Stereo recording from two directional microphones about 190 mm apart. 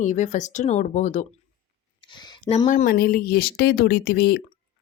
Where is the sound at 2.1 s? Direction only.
25° left (ahead or behind).